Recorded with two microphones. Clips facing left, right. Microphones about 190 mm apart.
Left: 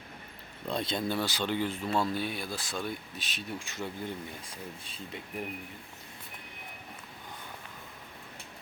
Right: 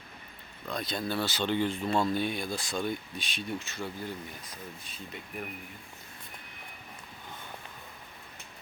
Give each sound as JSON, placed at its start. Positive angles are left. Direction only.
{"t": 0.7, "sound": "speech", "side_deg": 25}
{"t": 3.7, "sound": "speech", "side_deg": 20}